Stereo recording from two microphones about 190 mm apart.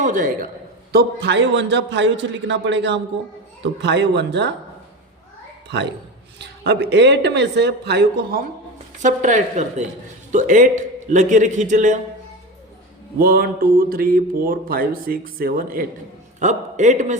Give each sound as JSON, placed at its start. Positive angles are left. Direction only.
{"t": 0.0, "sound": "speech", "side_deg": -45}
{"t": 0.9, "sound": "a man's voice", "side_deg": -60}
{"t": 6.4, "sound": "speech", "side_deg": -65}
{"t": 9.0, "sound": "a man's voice", "side_deg": -40}
{"t": 13.1, "sound": "speech", "side_deg": -50}
{"t": 16.4, "sound": "a man's voice", "side_deg": -40}